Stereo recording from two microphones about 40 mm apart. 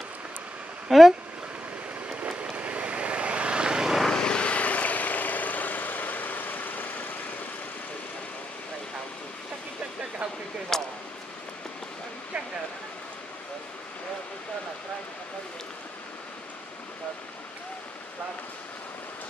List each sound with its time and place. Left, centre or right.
0.8 s speech: centre
2.0 s a sound: right
2.5 s vehicle: right
4.0 s vehicle: centre
4.3 s vehicle: left
10.7 s a sound: centre